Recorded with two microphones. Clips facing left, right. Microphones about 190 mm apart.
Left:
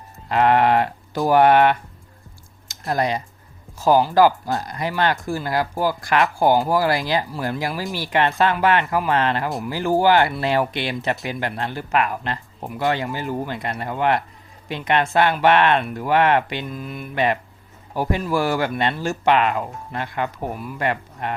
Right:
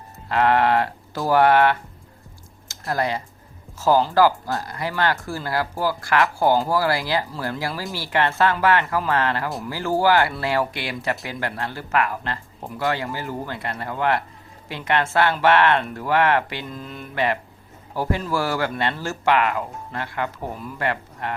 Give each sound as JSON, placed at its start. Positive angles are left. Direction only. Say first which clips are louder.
{"t": 0.3, "sound": "speech", "louder": "left 2 dB", "side_deg": 20}